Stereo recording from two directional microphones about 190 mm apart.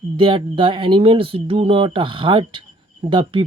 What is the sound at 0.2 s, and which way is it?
Speech, 30° right (ahead or behind).